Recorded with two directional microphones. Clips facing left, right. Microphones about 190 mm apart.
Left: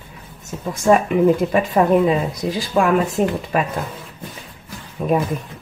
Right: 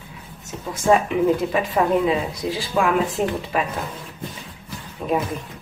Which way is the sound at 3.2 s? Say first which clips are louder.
Left 4 dB; 45° left (ahead or behind).